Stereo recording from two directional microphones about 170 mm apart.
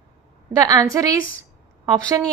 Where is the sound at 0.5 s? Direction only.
20° right (ahead or behind).